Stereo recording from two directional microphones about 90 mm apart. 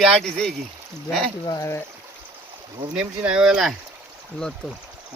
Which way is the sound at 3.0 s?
10° right (ahead or behind).